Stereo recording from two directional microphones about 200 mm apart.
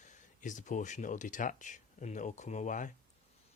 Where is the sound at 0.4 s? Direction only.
40° left (ahead or behind).